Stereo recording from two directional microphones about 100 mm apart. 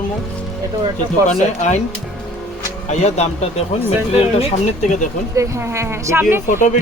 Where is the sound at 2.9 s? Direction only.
90° left.